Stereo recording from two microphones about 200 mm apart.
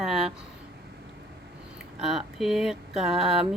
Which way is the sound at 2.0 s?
Centre (ahead or behind).